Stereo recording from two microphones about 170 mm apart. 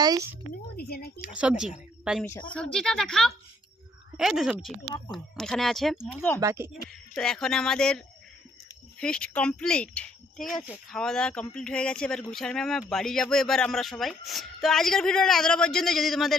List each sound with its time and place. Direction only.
0.0 s a sound: 20° right (ahead or behind)
0.8 s speech: 65° left (ahead or behind)
1.2 s speech: 5° right (ahead or behind)
4.9 s speech: 20° left (ahead or behind)
5.1 s speech: centre (ahead or behind)
6.4 s speech: 15° right (ahead or behind)
6.8 s speech: centre (ahead or behind)